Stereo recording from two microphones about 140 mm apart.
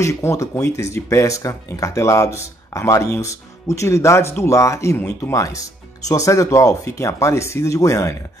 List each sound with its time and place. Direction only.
0.0 s speech: 20° left (ahead or behind)